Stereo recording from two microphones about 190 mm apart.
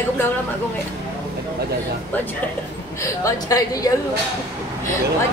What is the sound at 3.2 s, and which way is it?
Speech, 20° left (ahead or behind).